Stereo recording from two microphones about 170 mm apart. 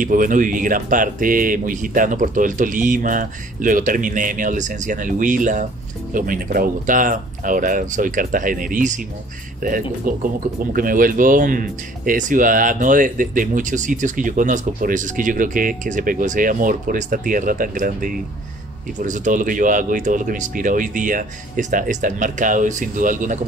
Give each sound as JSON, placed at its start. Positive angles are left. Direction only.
{"t": 0.0, "sound": "speech", "side_deg": -50}